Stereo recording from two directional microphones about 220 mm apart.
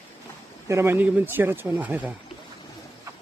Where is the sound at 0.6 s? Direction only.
10° right (ahead or behind).